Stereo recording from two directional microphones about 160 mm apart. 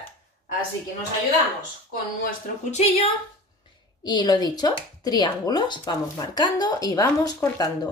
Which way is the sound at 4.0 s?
25° left (ahead or behind).